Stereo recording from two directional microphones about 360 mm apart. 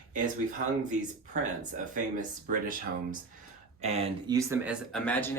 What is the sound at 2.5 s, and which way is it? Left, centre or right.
Speech, right.